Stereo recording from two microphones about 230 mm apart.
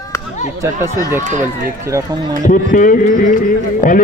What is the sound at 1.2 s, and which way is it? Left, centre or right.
Speech, right.